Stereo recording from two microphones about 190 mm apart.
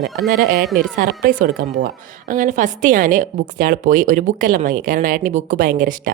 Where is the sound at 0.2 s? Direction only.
50° right (ahead or behind).